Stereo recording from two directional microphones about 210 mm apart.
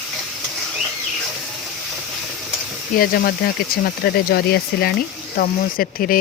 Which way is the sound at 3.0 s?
45° left (ahead or behind).